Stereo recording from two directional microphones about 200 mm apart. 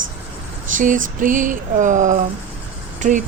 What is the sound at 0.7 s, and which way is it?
Speech, 40° right (ahead or behind).